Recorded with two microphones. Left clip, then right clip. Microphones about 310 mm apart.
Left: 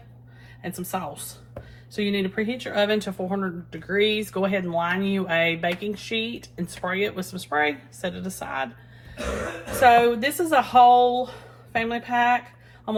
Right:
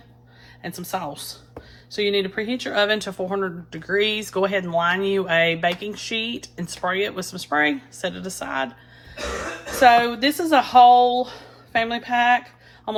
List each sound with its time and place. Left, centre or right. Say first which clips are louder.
0.6 s a woman's voice: right 2 dB; right
9.8 s a woman's voice: right 1 dB; right